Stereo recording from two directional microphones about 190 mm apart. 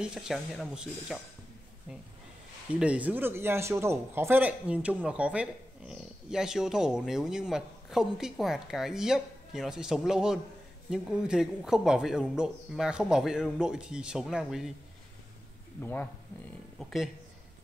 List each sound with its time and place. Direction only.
0.0 s speech: 5° right (ahead or behind)
2.7 s speech: 5° right (ahead or behind)
15.8 s speech: 10° left (ahead or behind)